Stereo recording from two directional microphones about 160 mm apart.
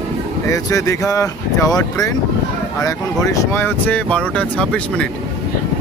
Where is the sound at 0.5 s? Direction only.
20° left (ahead or behind).